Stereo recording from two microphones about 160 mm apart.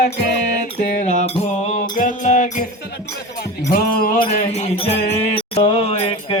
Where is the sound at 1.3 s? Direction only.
50° left (ahead or behind).